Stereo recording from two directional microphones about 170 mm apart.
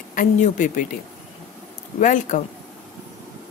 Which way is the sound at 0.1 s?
50° left (ahead or behind).